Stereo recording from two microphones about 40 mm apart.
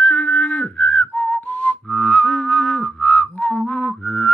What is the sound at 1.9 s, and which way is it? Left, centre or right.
Music, centre.